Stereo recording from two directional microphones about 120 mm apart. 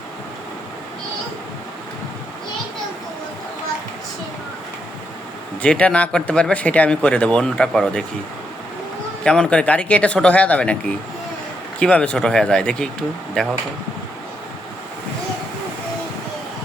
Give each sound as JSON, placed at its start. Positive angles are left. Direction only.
{"t": 5.6, "sound": "speech", "side_deg": 10}
{"t": 9.2, "sound": "speech", "side_deg": 5}